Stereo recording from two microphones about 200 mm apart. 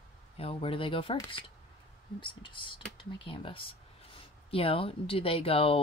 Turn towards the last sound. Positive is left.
turn(degrees=30)  # may be behind; listen again after turning